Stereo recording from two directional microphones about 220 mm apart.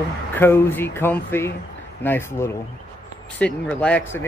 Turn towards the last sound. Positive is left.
turn(degrees=5)  # may be behind; listen again after turning